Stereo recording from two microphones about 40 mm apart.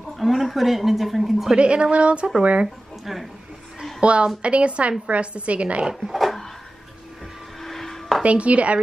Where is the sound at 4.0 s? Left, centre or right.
Right.